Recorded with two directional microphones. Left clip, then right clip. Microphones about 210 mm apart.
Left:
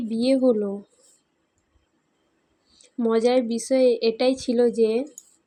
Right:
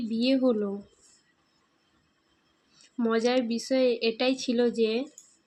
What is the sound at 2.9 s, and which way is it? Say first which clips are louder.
A woman's voice: left 5 dB; 10° left (ahead or behind).